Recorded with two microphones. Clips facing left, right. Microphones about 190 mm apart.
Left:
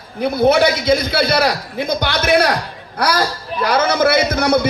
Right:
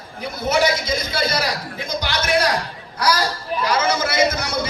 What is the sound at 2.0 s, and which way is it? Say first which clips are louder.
Music: left 4 dB; 60° left (ahead or behind).